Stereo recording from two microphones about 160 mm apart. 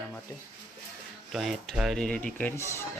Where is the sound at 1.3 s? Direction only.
Centre (ahead or behind).